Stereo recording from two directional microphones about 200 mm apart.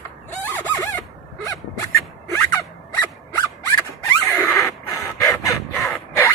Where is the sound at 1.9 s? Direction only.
10° left (ahead or behind).